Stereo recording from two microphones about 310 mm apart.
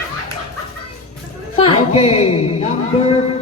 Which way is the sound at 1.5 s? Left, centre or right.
Centre.